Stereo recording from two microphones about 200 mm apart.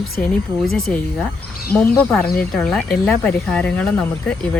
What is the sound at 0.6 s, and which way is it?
Speech, centre (ahead or behind).